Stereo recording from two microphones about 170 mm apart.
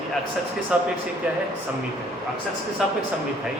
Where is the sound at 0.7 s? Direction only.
5° right (ahead or behind).